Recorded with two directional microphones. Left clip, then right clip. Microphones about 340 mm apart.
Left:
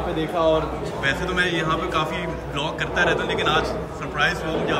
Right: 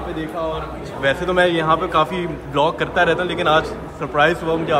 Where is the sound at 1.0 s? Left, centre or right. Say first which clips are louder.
Right 6 dB; centre.